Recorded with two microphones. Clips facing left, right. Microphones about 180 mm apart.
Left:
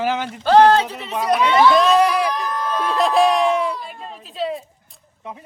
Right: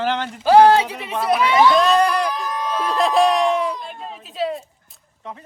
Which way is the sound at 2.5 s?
10° right (ahead or behind).